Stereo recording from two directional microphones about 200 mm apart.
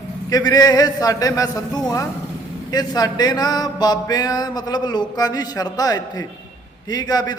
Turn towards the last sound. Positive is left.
turn(degrees=20)  # may be behind; listen again after turning